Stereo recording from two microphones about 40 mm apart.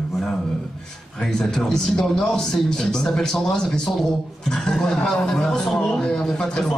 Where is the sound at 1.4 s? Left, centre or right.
Centre.